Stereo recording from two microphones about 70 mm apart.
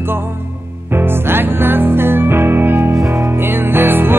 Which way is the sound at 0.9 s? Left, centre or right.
Right.